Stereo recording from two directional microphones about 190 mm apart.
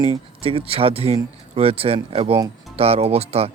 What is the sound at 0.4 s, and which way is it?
Speech, 30° right (ahead or behind).